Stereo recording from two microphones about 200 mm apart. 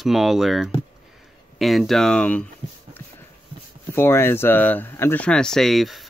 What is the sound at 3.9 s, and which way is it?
Speech, 10° left (ahead or behind).